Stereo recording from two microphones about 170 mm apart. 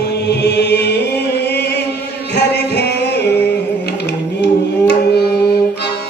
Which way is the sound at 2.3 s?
80° left.